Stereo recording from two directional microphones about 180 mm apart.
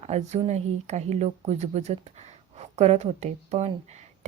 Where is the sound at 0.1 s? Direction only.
40° right (ahead or behind).